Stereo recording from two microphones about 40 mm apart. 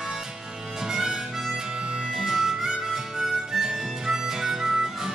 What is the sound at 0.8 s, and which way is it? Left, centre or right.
Harmonica, centre.